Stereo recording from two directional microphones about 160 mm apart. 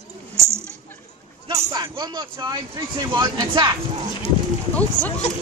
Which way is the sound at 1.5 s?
25° right (ahead or behind).